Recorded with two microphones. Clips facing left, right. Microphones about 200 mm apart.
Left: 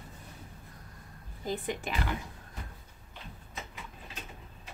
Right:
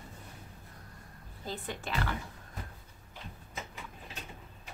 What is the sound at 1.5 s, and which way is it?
Speech, 15° left (ahead or behind).